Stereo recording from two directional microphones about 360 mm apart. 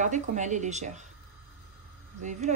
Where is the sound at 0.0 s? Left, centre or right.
Centre.